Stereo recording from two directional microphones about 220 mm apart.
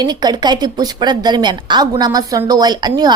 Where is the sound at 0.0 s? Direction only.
20° right (ahead or behind).